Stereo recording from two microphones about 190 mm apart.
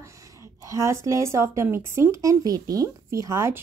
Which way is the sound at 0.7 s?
15° right (ahead or behind).